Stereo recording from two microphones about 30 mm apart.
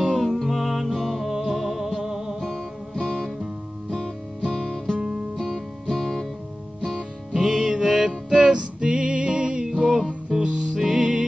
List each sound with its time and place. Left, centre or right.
0.0 s music: centre
1.2 s music: centre
2.4 s music: centre
3.0 s music: left
3.9 s music: centre
4.9 s music: right
5.4 s music: centre
7.3 s music: centre; by 9.7 s right
9.7 s music: right